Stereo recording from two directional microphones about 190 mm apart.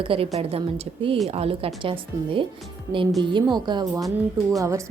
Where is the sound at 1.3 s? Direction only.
30° right (ahead or behind).